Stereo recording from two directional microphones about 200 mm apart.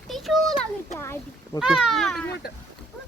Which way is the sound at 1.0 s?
10° left (ahead or behind).